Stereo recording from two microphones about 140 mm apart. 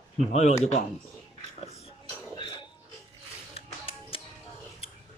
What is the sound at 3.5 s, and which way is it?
Music, 40° left (ahead or behind).